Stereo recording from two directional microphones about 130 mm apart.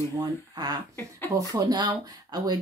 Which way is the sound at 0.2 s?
30° right (ahead or behind).